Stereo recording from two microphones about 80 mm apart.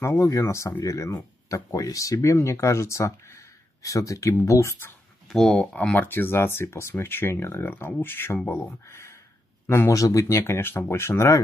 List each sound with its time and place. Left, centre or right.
0.0 s speech: left
5.3 s speech: centre
5.6 s speech: centre; by 9.9 s left
9.9 s speech: left